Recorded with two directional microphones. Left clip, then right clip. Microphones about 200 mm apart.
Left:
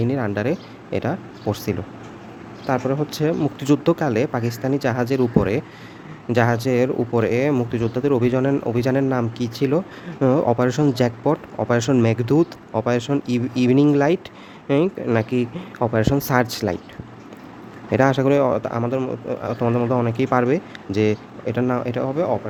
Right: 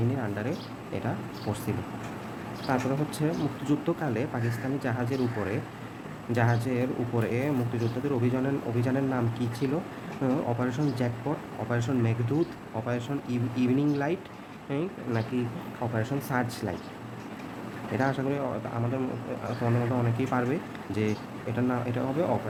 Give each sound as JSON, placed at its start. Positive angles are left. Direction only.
{"t": 0.2, "sound": "speech", "side_deg": 50}
{"t": 2.7, "sound": "speech", "side_deg": 45}
{"t": 17.9, "sound": "speech", "side_deg": 55}